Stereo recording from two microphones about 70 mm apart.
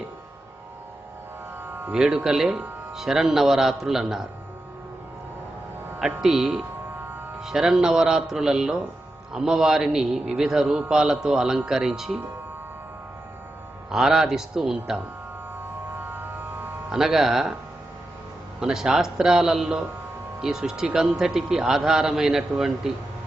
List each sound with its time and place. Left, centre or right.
1.9 s a man's voice: centre
6.2 s a man's voice: centre
13.9 s a man's voice: centre
16.0 s music: right
16.9 s a man's voice: centre
18.6 s a man's voice: centre